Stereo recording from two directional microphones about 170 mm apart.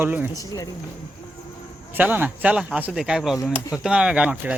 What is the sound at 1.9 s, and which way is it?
Speech, 10° right (ahead or behind).